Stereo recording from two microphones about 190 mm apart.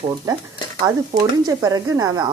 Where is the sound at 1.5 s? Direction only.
20° right (ahead or behind).